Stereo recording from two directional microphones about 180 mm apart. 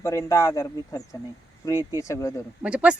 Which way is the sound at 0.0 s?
15° left (ahead or behind).